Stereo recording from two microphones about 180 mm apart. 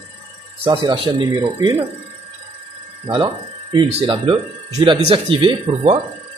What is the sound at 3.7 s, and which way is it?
Speech, 25° right (ahead or behind).